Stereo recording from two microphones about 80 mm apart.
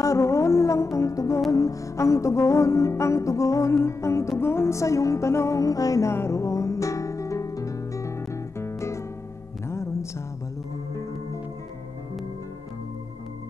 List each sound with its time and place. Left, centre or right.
0.0 s music: left